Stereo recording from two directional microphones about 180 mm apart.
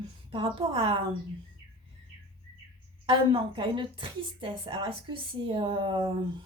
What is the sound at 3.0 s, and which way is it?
Speech, 25° right (ahead or behind).